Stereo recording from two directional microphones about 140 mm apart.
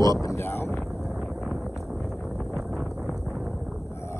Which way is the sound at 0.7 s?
Centre (ahead or behind).